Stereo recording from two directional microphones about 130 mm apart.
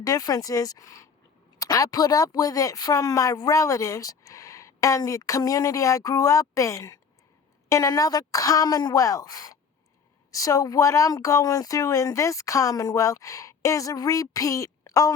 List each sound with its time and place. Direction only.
0.0 s speech: 25° left (ahead or behind)